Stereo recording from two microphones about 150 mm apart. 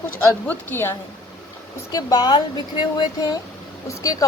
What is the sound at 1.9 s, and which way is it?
Speech, 25° left (ahead or behind).